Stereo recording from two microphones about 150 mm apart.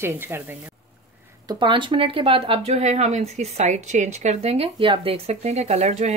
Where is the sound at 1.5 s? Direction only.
30° right (ahead or behind).